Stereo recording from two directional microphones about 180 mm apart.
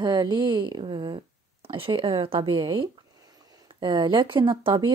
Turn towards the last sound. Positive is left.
turn(degrees=-30)  # may be behind; listen again after turning